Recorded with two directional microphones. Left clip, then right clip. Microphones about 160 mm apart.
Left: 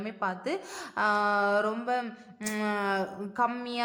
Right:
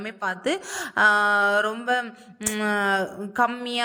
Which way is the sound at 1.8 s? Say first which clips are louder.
Right 6 dB; 25° right (ahead or behind).